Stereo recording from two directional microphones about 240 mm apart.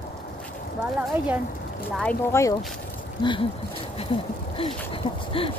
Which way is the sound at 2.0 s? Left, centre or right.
Centre.